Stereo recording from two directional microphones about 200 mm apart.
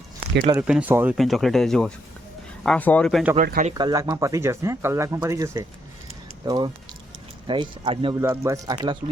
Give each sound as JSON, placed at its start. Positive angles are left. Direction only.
{"t": 0.5, "sound": "speech", "side_deg": -5}
{"t": 3.3, "sound": "speech", "side_deg": -40}
{"t": 3.7, "sound": "speech", "side_deg": -20}
{"t": 8.2, "sound": "speech", "side_deg": -15}